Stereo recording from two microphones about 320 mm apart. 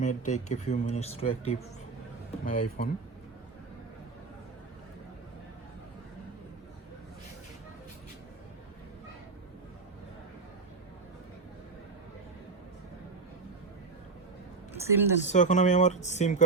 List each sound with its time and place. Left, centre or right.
0.0 s speech: left
14.7 s a sound: centre
15.2 s speech: left